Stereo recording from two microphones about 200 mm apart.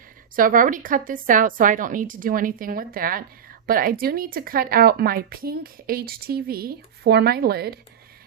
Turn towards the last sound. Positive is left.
turn(degrees=-50)  # may be behind; listen again after turning